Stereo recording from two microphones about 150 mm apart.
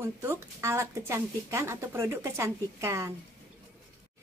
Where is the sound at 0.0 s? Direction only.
20° right (ahead or behind).